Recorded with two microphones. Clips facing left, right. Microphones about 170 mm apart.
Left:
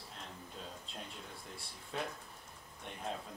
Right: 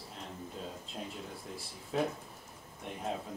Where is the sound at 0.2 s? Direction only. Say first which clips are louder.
Right 6 dB; 5° right (ahead or behind).